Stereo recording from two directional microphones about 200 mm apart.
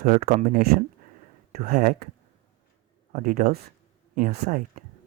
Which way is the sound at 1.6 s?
40° right (ahead or behind).